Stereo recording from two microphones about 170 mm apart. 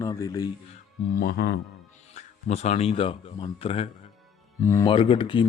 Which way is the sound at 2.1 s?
40° left (ahead or behind).